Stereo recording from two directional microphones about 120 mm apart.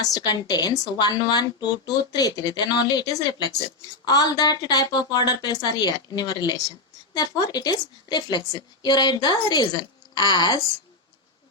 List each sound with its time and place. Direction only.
0.0 s a woman's voice: 35° left (ahead or behind)